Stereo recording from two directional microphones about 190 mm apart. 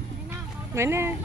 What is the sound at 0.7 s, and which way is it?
Speech, 15° right (ahead or behind).